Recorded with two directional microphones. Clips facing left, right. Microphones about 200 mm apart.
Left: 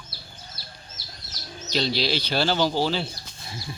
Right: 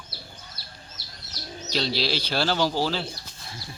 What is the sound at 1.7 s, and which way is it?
Speech, 5° right (ahead or behind).